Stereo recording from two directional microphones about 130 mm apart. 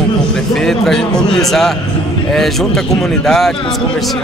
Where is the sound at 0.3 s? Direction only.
5° left (ahead or behind).